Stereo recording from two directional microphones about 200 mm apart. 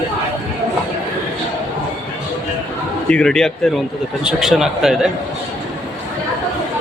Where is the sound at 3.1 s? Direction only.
5° left (ahead or behind).